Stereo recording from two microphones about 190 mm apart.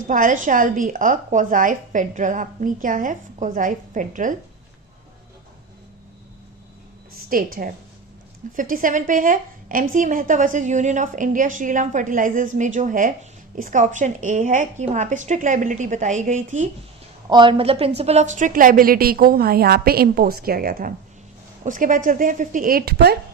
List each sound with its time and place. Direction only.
0.1 s a woman's voice: 45° right (ahead or behind)
7.3 s a woman's voice: 50° right (ahead or behind)
17.2 s a woman's voice: 25° right (ahead or behind); by 23.1 s 55° right (ahead or behind)